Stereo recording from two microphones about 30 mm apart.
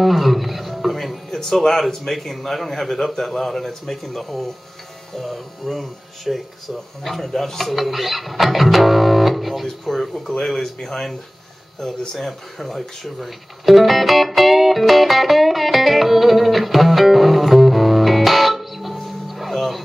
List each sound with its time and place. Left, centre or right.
0.0 s speech: centre
0.9 s music: centre
1.3 s a man's voice: centre
9.9 s a man's voice: centre
12.3 s speech: centre
19.2 s music: centre